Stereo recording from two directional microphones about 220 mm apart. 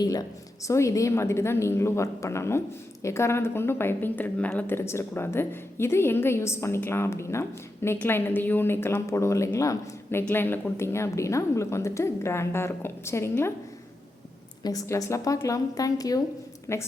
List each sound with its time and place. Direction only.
0.0 s a woman's voice: 15° left (ahead or behind)
14.6 s a woman's voice: 15° left (ahead or behind)